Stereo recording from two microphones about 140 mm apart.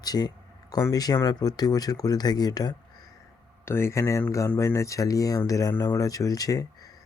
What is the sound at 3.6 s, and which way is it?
Speech, 15° left (ahead or behind).